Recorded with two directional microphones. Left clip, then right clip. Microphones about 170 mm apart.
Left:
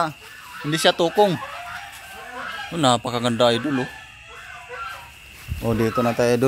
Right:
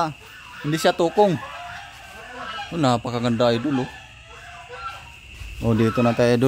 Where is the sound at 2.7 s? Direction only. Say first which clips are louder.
Left 2 dB; centre (ahead or behind).